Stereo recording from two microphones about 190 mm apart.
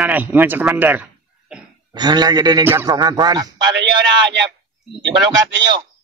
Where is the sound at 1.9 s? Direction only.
20° right (ahead or behind).